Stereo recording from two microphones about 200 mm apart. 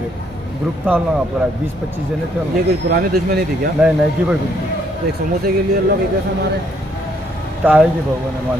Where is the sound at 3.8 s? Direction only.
5° right (ahead or behind).